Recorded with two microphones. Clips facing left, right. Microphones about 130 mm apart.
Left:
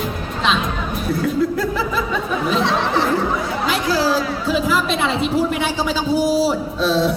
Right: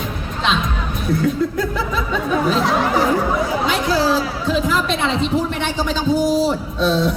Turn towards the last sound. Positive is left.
turn(degrees=0)  # may be behind; listen again after turning